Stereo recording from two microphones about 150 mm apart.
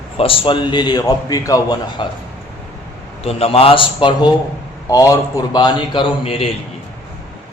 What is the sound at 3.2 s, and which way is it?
Speech, 40° left (ahead or behind).